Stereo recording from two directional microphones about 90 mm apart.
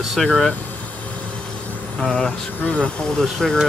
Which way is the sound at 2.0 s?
5° left (ahead or behind).